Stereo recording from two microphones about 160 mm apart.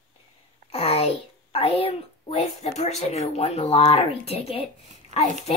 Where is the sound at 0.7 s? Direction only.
40° left (ahead or behind).